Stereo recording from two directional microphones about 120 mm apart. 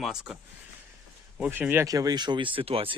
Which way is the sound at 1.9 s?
30° right (ahead or behind).